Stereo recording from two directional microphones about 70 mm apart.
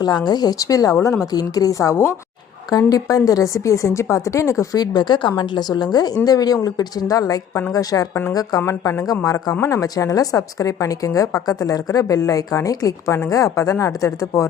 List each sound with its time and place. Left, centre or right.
0.0 s a woman's voice: left
2.6 s a woman's voice: left
4.8 s a woman's voice: left
6.2 s a woman's voice: left
8.6 s a woman's voice: left
9.2 s a woman's voice: left
9.6 s a woman's voice: left
9.8 s a woman's voice: left